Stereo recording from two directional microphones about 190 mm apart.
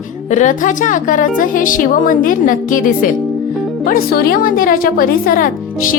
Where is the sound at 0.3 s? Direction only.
40° left (ahead or behind).